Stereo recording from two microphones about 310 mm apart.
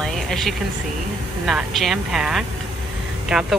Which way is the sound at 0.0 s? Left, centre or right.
Centre.